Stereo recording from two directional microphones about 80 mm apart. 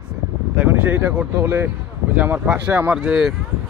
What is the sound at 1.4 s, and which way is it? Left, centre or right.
Speech, right.